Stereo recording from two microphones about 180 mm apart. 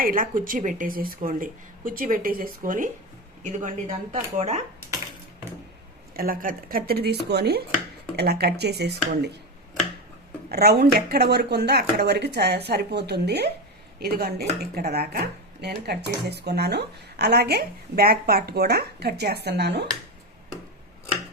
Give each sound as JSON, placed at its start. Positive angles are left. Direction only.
{"t": 0.0, "sound": "speech", "side_deg": -50}
{"t": 6.1, "sound": "speech", "side_deg": -50}
{"t": 10.5, "sound": "speech", "side_deg": -60}